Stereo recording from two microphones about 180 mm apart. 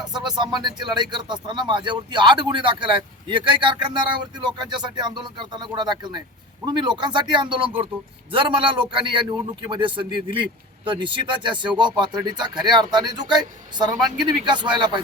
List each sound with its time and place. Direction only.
0.0 s a man's voice: 25° right (ahead or behind)